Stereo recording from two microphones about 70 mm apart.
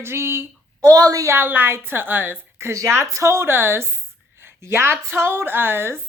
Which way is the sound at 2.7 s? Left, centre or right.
Right.